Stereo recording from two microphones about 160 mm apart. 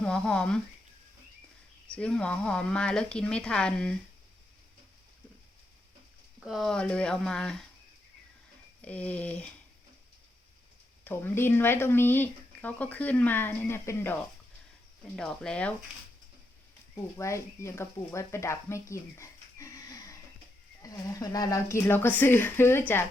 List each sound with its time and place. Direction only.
0.0 s speech: 5° left (ahead or behind)
2.0 s speech: 5° left (ahead or behind)
6.4 s speech: centre (ahead or behind)
8.8 s speech: 10° left (ahead or behind)
11.0 s speech: 15° left (ahead or behind)
16.9 s speech: 15° left (ahead or behind)